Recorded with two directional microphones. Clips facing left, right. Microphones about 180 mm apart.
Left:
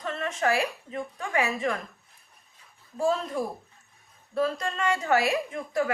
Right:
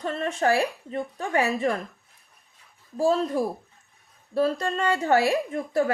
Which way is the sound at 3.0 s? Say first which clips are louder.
Right 4 dB; 35° right (ahead or behind).